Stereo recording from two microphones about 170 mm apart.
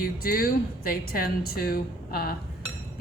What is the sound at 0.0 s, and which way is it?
Speech, 60° left (ahead or behind).